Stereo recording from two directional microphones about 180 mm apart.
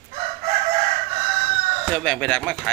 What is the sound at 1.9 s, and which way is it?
Speech, 5° left (ahead or behind).